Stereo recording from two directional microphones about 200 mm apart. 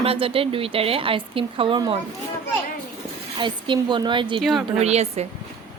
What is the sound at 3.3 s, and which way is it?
Speech, 25° right (ahead or behind).